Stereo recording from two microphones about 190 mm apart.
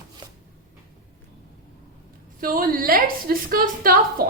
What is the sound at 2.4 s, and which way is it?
A woman's voice, 50° right (ahead or behind).